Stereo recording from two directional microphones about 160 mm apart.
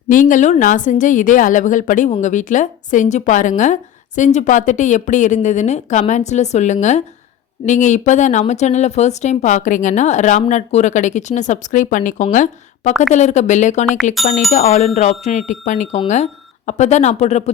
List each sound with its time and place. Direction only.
0.1 s a woman's voice: 55° left (ahead or behind)